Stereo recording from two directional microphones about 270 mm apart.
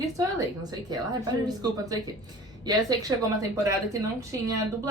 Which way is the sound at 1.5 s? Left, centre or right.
Centre.